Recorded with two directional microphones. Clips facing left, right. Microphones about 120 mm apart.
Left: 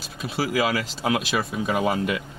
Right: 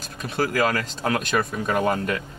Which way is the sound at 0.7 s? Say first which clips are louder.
Even; 10° left (ahead or behind).